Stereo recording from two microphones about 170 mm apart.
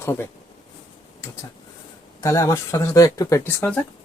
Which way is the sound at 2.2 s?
15° left (ahead or behind).